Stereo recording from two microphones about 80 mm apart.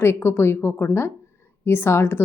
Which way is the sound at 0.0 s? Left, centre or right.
Left.